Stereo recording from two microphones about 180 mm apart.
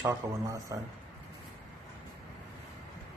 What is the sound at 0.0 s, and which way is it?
Speech, 20° right (ahead or behind).